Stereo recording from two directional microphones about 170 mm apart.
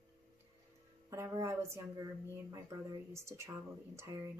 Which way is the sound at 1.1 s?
15° right (ahead or behind).